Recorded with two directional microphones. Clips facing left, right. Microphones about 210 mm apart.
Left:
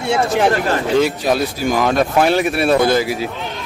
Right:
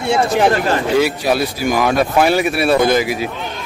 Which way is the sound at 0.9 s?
10° right (ahead or behind).